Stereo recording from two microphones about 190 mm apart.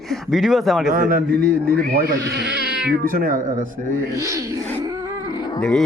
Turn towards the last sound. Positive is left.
turn(degrees=20)  # may be behind; listen again after turning